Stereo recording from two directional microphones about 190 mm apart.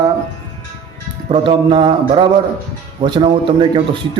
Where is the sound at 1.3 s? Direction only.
25° right (ahead or behind).